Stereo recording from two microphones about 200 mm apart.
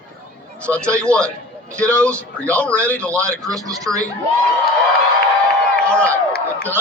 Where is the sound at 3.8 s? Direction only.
15° right (ahead or behind).